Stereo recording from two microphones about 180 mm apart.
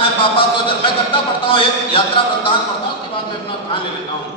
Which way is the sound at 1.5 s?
30° left (ahead or behind).